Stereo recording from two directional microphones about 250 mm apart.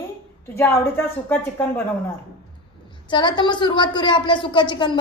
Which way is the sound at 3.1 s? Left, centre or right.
Centre.